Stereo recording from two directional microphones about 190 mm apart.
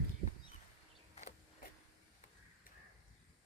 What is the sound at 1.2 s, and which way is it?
Vehicle, 40° left (ahead or behind).